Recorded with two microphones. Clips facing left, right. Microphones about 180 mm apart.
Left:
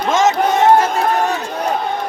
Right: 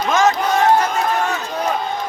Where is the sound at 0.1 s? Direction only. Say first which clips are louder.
Left 2 dB; 25° left (ahead or behind).